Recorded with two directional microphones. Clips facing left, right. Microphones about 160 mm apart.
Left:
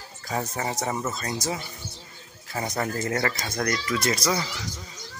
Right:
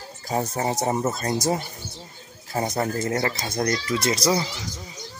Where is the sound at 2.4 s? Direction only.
30° right (ahead or behind).